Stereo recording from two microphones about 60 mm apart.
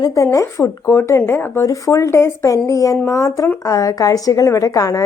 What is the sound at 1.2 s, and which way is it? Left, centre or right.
Speech, left.